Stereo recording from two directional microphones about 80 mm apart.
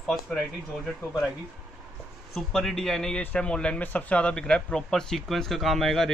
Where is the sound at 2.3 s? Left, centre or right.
Centre.